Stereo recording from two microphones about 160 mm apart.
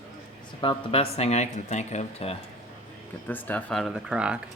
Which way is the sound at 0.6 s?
35° left (ahead or behind).